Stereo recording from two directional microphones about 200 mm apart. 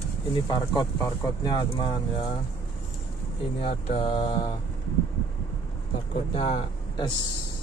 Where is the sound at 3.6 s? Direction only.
30° left (ahead or behind).